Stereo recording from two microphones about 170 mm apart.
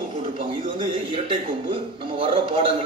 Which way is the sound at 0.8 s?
30° right (ahead or behind).